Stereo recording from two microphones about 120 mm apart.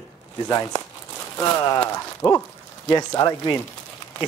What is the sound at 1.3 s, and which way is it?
Speech, 25° left (ahead or behind).